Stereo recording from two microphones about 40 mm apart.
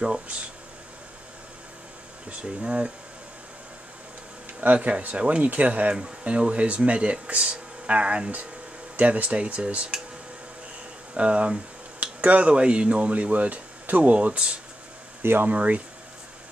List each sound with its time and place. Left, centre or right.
0.0 s speech: right
2.2 s speech: right
4.6 s speech: right
11.1 s speech: right
14.1 s speech: right
15.2 s speech: right
15.5 s speech: right